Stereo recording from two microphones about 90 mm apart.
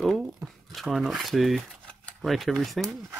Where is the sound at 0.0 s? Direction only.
Centre (ahead or behind).